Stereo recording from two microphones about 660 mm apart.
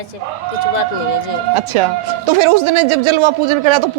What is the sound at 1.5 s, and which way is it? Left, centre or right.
Speech, right.